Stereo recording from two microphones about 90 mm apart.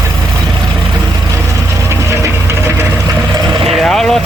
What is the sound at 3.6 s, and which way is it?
Vehicle, centre (ahead or behind).